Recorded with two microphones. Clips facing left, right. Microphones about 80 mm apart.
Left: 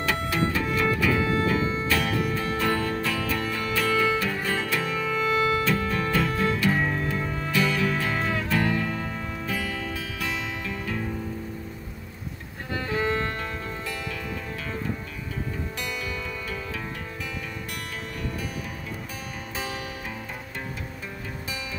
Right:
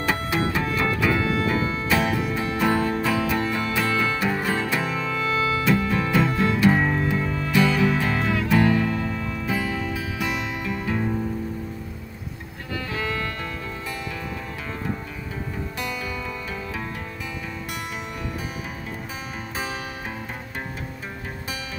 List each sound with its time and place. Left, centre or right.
0.0 s music: right
4.8 s music: centre
5.3 s music: left
5.7 s music: centre
6.8 s music: right
7.5 s music: centre
8.9 s music: left
9.5 s music: centre
12.9 s music: left
19.5 s music: right